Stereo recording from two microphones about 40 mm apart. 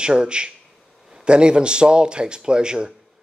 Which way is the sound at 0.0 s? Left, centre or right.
Right.